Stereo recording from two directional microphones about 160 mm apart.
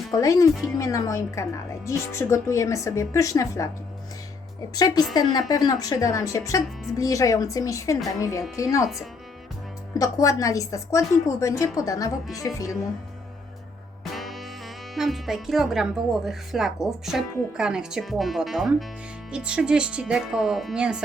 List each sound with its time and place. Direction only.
0.1 s a woman's voice: 20° left (ahead or behind)
4.7 s a woman's voice: 25° left (ahead or behind)
10.0 s a woman's voice: 20° left (ahead or behind)
14.0 s music: centre (ahead or behind)
14.9 s speech: centre (ahead or behind)